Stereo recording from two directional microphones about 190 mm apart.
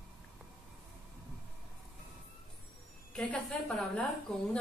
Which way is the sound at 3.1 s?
5° left (ahead or behind).